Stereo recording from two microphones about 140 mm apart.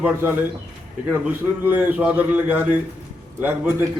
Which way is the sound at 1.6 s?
10° right (ahead or behind).